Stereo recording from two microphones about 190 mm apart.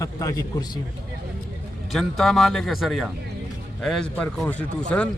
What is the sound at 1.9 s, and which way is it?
A man's voice, centre (ahead or behind).